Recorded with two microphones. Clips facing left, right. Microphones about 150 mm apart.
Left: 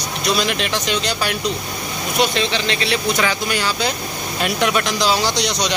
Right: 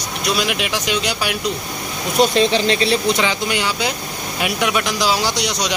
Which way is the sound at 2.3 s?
40° right (ahead or behind).